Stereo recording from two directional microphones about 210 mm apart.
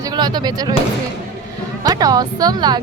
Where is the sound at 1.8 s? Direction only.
15° right (ahead or behind).